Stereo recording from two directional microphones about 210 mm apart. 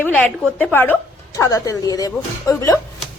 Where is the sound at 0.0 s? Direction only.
5° left (ahead or behind).